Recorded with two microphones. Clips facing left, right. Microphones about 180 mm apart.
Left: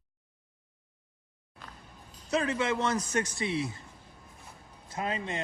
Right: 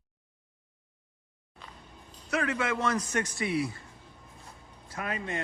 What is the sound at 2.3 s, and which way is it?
A man's voice, 25° left (ahead or behind).